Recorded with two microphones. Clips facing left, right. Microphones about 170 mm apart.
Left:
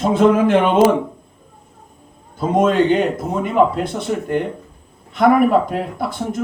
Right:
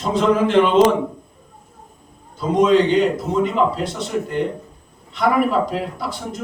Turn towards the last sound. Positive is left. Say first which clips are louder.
# left 5 dB
turn(degrees=55)  # may be behind; listen again after turning